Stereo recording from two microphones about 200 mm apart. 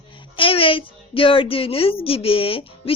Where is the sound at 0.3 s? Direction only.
25° left (ahead or behind).